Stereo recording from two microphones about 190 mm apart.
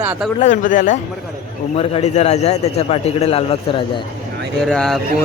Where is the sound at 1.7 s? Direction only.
30° left (ahead or behind).